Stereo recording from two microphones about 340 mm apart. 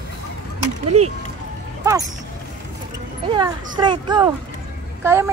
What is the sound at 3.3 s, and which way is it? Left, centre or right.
Speech, centre.